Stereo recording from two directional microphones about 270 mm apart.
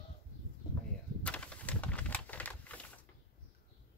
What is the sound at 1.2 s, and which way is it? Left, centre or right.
Typing, centre.